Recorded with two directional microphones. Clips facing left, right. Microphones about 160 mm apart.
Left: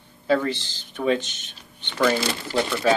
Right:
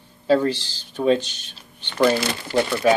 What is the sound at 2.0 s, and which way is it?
Speech, 15° right (ahead or behind).